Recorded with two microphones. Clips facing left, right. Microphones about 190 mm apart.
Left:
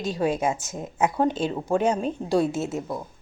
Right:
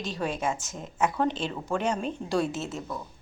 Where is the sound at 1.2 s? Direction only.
45° left (ahead or behind).